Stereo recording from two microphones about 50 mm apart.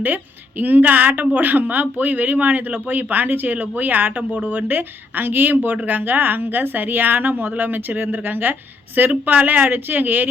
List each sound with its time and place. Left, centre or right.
0.0 s a woman's voice: right